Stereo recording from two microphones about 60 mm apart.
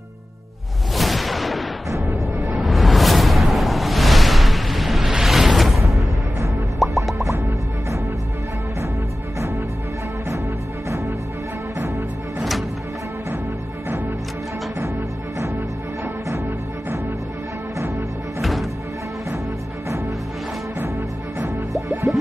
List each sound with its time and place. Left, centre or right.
0.9 s a sound: centre
2.4 s music: centre
18.4 s music: centre
21.8 s music: right